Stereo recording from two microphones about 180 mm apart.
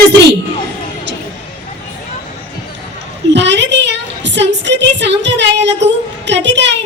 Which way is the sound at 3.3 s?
75° right (ahead or behind).